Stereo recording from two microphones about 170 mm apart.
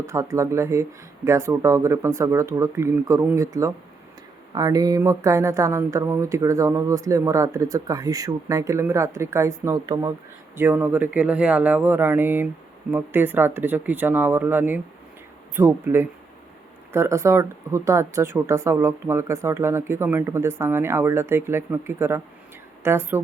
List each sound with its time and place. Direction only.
0.0 s speech: 15° right (ahead or behind)